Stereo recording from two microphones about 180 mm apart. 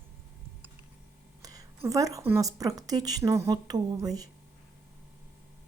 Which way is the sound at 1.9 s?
20° right (ahead or behind).